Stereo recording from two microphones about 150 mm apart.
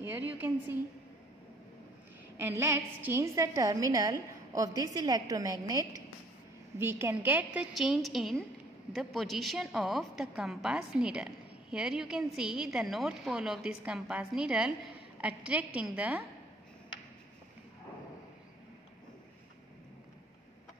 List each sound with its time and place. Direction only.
0.1 s a woman's voice: 10° right (ahead or behind)
2.3 s a woman's voice: 15° right (ahead or behind)